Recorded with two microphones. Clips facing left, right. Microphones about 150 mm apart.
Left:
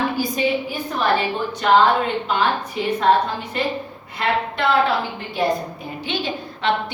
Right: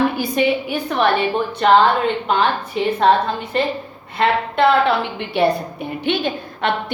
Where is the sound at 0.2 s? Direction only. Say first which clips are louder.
Right 3 dB; 70° right (ahead or behind).